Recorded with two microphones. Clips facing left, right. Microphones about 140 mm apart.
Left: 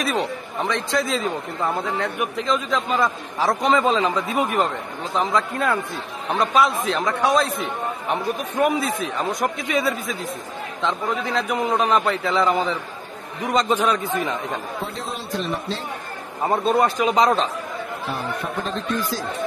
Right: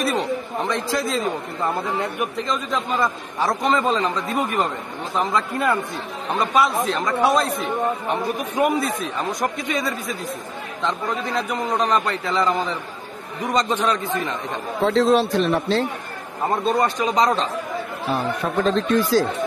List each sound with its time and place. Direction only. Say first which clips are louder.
0.0 s a man's voice: right 2 dB; centre (ahead or behind)
14.9 s a man's voice: right 13 dB; 90° right; by 15.9 s 70° right (ahead or behind)
16.4 s a man's voice: left 1 dB; 5° left (ahead or behind)
18.7 s speech: right 9 dB; 90° right